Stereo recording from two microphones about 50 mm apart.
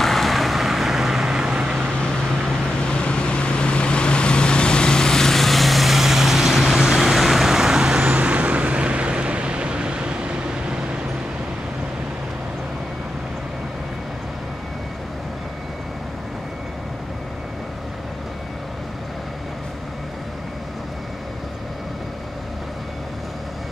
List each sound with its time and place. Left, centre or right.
0.0 s vehicle: centre
2.9 s vehicle: centre
8.0 s vehicle: right